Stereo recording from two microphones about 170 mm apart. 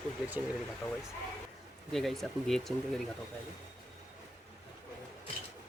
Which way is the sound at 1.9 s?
Centre (ahead or behind).